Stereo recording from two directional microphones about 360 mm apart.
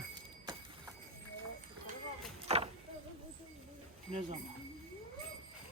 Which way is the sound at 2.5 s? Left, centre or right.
Centre.